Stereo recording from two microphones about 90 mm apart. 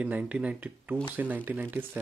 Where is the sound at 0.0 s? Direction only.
15° right (ahead or behind).